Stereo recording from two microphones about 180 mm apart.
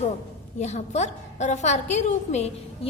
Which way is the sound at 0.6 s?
40° left (ahead or behind).